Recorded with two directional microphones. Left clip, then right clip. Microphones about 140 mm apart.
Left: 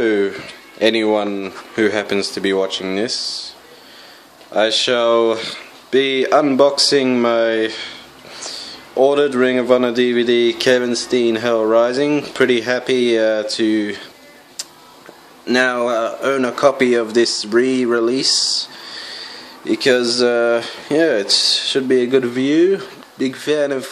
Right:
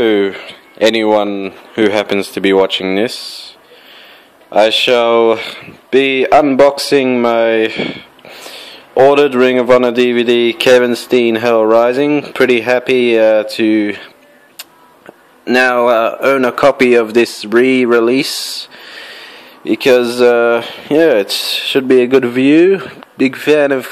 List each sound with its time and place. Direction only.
0.0 s speech: 35° right (ahead or behind)
4.5 s speech: 35° right (ahead or behind)
15.4 s a man's voice: 40° right (ahead or behind)